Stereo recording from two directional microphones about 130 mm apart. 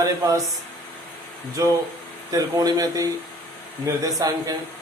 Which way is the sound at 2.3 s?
30° right (ahead or behind).